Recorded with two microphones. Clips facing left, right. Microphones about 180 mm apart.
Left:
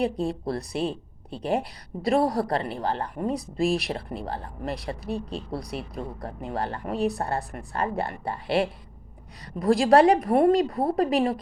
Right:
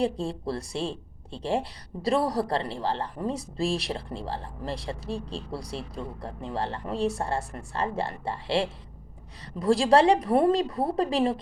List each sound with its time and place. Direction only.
0.0 s speech: 30° right (ahead or behind)